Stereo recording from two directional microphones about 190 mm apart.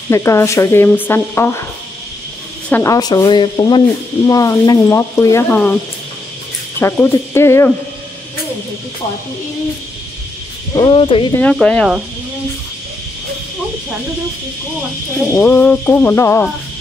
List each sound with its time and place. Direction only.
0.1 s speech: 15° left (ahead or behind)
2.7 s speech: 15° left (ahead or behind)
6.8 s speech: 15° left (ahead or behind)
10.7 s speech: 25° left (ahead or behind)
11.5 s speech: 5° left (ahead or behind)
15.3 s speech: 10° left (ahead or behind)